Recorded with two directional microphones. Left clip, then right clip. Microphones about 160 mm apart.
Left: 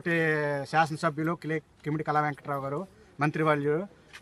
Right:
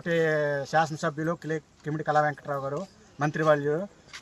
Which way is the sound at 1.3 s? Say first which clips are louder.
Right 1 dB; 20° left (ahead or behind).